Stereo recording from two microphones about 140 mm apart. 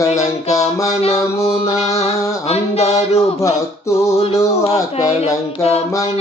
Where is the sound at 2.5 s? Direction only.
50° left (ahead or behind).